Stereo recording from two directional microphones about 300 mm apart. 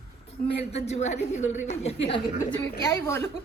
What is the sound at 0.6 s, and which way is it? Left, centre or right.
A woman's voice, left.